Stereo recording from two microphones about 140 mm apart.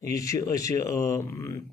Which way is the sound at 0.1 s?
25° left (ahead or behind).